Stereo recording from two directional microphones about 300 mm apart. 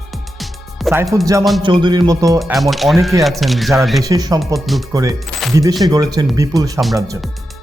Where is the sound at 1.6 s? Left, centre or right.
Centre.